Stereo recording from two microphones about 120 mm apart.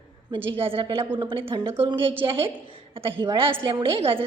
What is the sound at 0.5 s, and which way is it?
A woman's voice, 50° right (ahead or behind).